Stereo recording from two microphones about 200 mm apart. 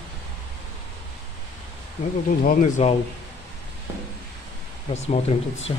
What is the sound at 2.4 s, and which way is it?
Speech, 40° left (ahead or behind).